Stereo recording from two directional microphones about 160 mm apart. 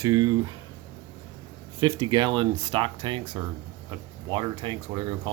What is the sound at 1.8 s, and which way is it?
Speech, 25° right (ahead or behind).